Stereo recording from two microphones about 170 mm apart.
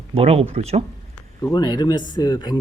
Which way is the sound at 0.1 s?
35° right (ahead or behind).